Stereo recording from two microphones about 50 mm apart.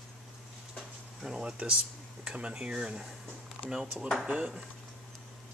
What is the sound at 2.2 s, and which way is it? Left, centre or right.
Speech, centre.